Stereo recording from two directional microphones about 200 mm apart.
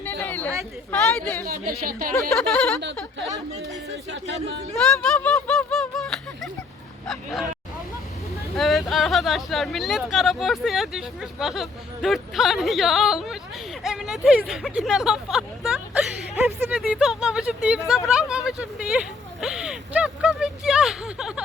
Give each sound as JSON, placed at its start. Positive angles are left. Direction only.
{"t": 0.0, "sound": "chatter", "side_deg": 10}
{"t": 0.9, "sound": "speech", "side_deg": 5}
{"t": 1.5, "sound": "speech", "side_deg": -50}
{"t": 2.3, "sound": "speech", "side_deg": 5}
{"t": 4.7, "sound": "a sound", "side_deg": 5}
{"t": 7.1, "sound": "speech", "side_deg": 0}
{"t": 8.5, "sound": "speech", "side_deg": 0}
{"t": 13.8, "sound": "vehicle", "side_deg": 0}
{"t": 16.6, "sound": "speech", "side_deg": -10}
{"t": 18.1, "sound": "a sound", "side_deg": -5}